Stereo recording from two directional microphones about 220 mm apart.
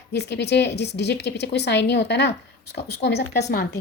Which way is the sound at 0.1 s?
50° left (ahead or behind).